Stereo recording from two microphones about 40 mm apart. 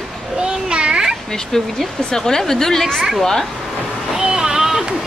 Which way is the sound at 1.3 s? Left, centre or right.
Centre.